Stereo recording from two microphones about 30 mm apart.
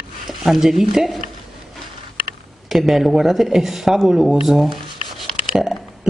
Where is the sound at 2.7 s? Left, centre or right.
Centre.